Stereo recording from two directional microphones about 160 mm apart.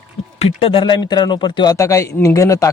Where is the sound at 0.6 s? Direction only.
35° left (ahead or behind).